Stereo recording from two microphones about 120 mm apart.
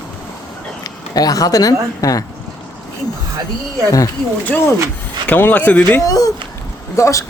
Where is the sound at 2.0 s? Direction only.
30° left (ahead or behind).